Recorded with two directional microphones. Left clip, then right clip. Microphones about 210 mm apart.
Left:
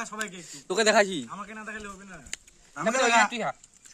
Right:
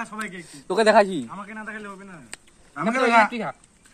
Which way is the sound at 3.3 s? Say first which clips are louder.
Right 1 dB; 55° left (ahead or behind).